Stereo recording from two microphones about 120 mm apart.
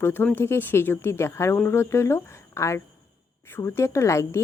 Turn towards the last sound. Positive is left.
turn(degrees=25)  # may be behind; listen again after turning